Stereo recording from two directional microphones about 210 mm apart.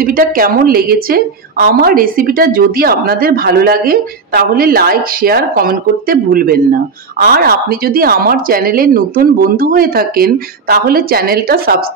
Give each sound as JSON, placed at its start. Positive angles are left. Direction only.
{"t": 0.0, "sound": "a woman's voice", "side_deg": -45}